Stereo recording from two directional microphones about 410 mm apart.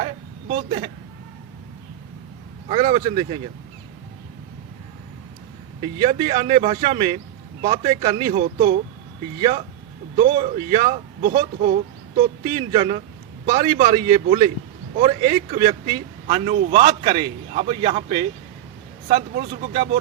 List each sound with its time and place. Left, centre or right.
0.0 s a sound: centre
2.6 s a man's voice: centre
5.8 s a man's voice: centre